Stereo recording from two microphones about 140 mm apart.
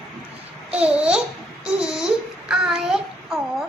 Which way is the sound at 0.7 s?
10° right (ahead or behind).